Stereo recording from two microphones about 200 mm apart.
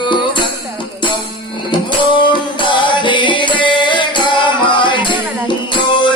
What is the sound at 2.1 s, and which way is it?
Music, 25° left (ahead or behind).